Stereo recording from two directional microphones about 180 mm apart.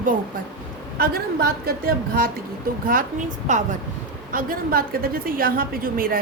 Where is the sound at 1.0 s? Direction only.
55° right (ahead or behind).